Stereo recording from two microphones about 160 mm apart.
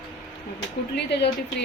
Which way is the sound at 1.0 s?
90° left.